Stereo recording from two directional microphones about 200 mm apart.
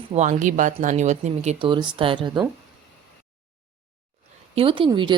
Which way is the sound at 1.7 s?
25° right (ahead or behind).